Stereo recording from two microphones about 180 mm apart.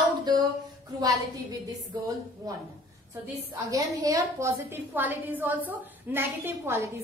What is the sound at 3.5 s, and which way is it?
A woman's voice, 20° right (ahead or behind).